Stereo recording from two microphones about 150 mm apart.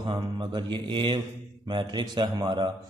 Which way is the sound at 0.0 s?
30° right (ahead or behind).